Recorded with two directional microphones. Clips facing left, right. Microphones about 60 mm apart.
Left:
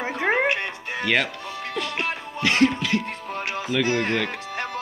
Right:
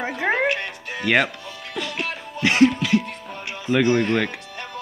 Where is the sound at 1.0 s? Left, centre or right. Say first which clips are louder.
Right 3 dB; centre.